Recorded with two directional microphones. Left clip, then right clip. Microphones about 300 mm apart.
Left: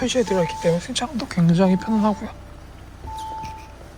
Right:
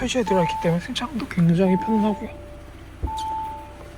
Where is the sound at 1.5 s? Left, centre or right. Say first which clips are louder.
Left 1 dB; left.